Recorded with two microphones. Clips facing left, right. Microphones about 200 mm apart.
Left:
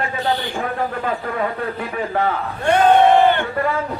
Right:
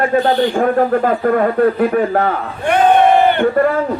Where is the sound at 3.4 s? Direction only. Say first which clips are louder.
Right 9 dB; 55° right (ahead or behind).